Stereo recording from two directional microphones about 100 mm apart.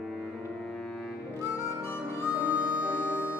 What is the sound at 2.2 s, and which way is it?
Harmonica, 15° right (ahead or behind).